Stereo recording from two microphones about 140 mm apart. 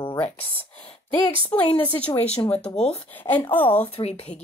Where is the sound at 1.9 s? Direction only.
10° left (ahead or behind).